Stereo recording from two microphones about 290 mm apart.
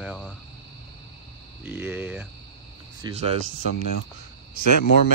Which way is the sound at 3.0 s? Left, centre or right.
Right.